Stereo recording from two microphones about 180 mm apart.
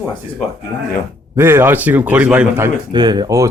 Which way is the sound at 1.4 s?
10° right (ahead or behind).